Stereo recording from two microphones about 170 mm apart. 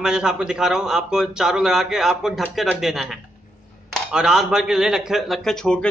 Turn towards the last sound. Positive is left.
turn(degrees=5)  # may be behind; listen again after turning